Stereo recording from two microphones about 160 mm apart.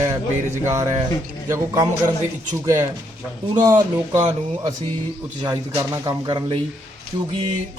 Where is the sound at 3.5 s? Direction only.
25° right (ahead or behind).